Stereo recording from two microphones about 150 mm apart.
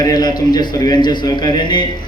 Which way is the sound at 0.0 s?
25° left (ahead or behind).